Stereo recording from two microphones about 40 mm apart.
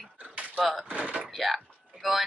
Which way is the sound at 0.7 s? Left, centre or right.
Right.